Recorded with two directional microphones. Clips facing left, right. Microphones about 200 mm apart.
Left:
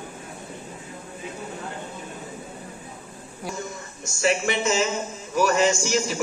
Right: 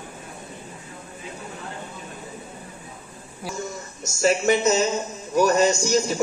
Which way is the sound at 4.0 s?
40° right (ahead or behind).